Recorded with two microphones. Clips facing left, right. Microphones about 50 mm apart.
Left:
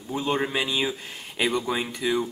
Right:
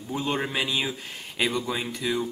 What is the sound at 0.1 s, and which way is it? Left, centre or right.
Speech, centre.